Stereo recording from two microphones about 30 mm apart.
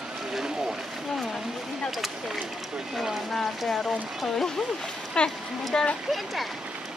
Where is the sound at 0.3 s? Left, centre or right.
Centre.